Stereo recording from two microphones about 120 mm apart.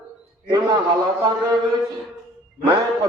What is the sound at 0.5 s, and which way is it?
A man's voice, 35° right (ahead or behind).